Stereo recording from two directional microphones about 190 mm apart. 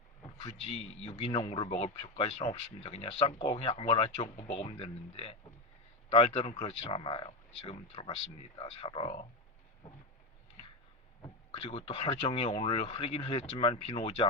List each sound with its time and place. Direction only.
0.6 s speech: 35° left (ahead or behind)
11.2 s speech: 30° left (ahead or behind)